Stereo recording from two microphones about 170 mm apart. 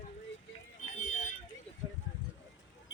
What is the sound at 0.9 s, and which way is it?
Vehicle, 45° left (ahead or behind).